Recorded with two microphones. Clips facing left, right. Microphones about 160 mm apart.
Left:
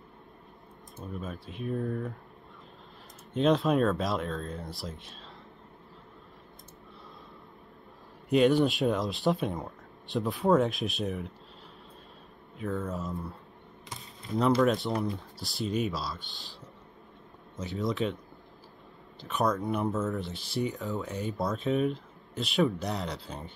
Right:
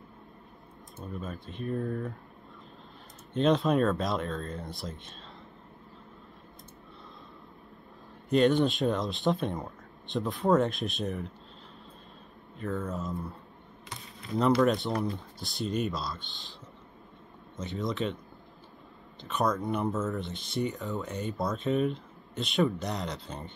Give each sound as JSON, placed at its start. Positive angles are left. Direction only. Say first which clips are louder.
{"t": 0.9, "sound": "speech", "louder": "even", "side_deg": 0}
{"t": 3.3, "sound": "speech", "louder": "even", "side_deg": 0}
{"t": 8.3, "sound": "speech", "louder": "left 1 dB", "side_deg": 5}
{"t": 12.5, "sound": "speech", "louder": "even", "side_deg": 0}
{"t": 14.6, "sound": "speech", "louder": "even", "side_deg": 0}
{"t": 16.2, "sound": "speech", "louder": "even", "side_deg": 40}
{"t": 17.6, "sound": "speech", "louder": "left 1 dB", "side_deg": 5}
{"t": 19.2, "sound": "speech", "louder": "even", "side_deg": 0}